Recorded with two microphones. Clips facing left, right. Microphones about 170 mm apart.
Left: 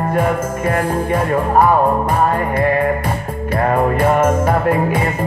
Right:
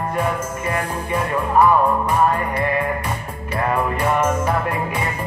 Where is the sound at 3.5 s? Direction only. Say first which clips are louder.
Left 5 dB; 50° left (ahead or behind).